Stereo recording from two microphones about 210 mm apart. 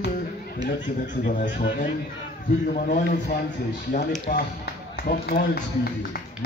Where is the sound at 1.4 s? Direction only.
40° left (ahead or behind).